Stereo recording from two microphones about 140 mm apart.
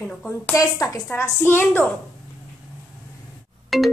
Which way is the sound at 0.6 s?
25° left (ahead or behind).